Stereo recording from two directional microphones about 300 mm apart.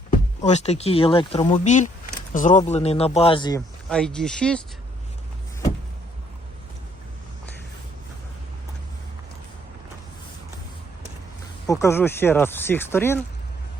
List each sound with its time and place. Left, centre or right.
0.4 s speech: left
3.8 s speech: centre
11.6 s speech: centre